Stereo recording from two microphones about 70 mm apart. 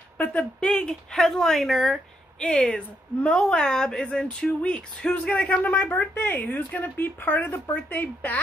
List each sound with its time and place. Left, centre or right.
0.2 s speech: centre
2.4 s speech: centre